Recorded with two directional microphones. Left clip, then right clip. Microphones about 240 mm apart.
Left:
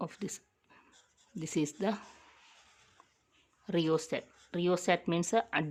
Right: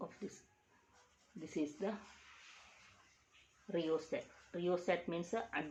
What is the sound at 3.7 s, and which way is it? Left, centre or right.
Speech, left.